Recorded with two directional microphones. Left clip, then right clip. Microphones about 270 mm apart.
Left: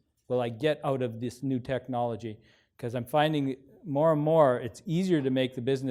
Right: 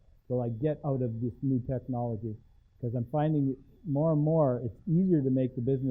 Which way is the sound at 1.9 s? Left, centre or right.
Left.